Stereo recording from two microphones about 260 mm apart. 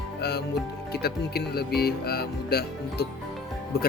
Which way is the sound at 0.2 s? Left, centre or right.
Left.